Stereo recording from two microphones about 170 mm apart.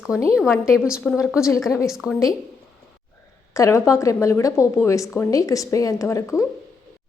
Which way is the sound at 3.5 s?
15° left (ahead or behind).